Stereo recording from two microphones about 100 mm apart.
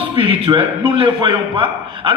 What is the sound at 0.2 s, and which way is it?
A man's voice, 60° right (ahead or behind).